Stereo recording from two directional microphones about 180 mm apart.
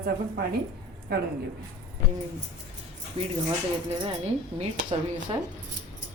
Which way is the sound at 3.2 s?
30° right (ahead or behind).